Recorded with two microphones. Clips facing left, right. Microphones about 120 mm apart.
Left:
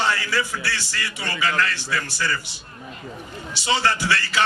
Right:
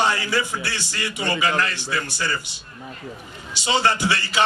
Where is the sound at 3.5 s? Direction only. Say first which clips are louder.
Right 2 dB; 20° right (ahead or behind).